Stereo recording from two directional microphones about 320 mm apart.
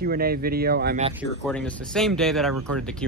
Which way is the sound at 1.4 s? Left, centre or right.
Centre.